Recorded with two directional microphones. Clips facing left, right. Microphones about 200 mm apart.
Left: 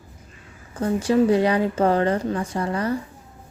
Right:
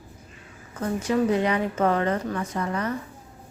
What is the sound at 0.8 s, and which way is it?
A woman's voice, 30° left (ahead or behind).